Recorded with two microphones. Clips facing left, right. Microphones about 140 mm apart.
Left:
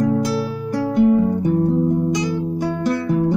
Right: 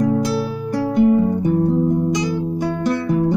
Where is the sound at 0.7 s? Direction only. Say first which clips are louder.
Even; 15° right (ahead or behind).